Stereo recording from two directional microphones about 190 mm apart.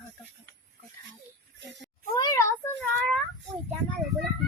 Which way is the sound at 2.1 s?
20° left (ahead or behind).